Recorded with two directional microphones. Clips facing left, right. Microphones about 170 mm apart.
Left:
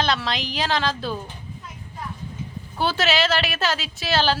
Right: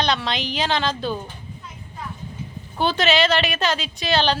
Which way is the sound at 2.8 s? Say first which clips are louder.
Right 2 dB; 5° left (ahead or behind).